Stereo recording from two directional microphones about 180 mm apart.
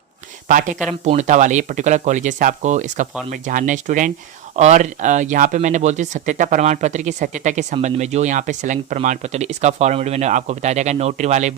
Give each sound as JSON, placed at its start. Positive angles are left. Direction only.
{"t": 0.4, "sound": "speech", "side_deg": -45}